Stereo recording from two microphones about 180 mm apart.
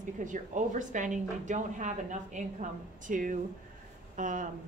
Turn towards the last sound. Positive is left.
turn(degrees=-45)  # may be behind; listen again after turning